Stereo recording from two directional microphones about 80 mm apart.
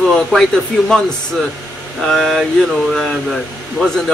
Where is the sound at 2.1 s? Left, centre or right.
Centre.